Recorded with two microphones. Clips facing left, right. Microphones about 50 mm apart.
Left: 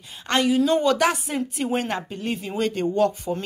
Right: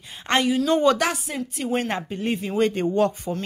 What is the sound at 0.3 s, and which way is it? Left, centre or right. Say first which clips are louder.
Speech: right 1 dB; right.